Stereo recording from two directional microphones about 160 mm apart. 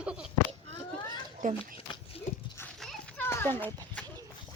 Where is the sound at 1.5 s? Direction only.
35° left (ahead or behind).